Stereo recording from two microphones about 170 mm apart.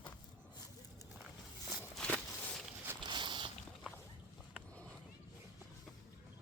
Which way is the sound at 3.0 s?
30° right (ahead or behind).